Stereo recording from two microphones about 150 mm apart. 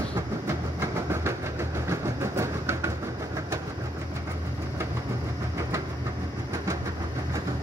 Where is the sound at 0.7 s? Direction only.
20° right (ahead or behind).